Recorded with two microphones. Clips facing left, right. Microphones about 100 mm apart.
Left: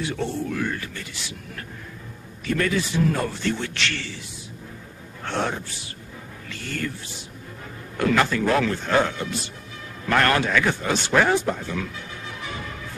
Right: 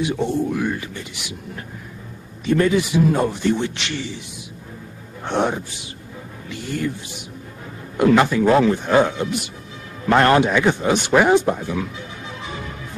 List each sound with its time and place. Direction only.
0.0 s speech: 15° right (ahead or behind)
5.2 s speech: 15° right (ahead or behind)